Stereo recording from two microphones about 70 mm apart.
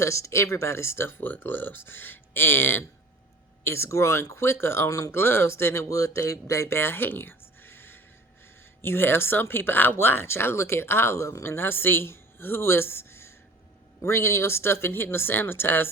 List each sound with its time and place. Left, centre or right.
0.0 s speech: left
4.9 s speech: left
5.1 s speech: left
5.9 s speech: left
11.5 s speech: left